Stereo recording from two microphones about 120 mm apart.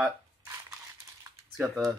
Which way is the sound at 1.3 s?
30° right (ahead or behind).